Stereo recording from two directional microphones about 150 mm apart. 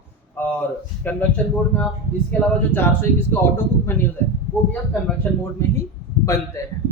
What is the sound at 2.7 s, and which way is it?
Male singing, 15° left (ahead or behind).